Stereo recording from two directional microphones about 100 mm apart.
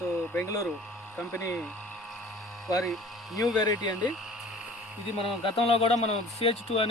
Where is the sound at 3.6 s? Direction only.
40° left (ahead or behind).